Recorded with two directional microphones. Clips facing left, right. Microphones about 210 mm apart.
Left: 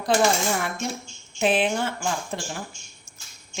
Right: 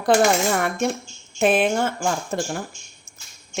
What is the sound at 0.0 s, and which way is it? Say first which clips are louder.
Coin: right 4 dB; 55° right (ahead or behind).